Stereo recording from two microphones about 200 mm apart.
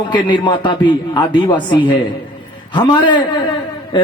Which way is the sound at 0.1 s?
25° left (ahead or behind).